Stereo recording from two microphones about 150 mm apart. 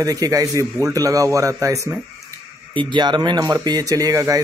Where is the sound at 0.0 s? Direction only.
25° right (ahead or behind).